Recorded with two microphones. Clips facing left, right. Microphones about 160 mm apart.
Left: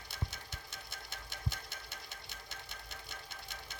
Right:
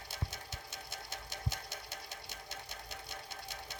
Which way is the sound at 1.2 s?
40° right (ahead or behind).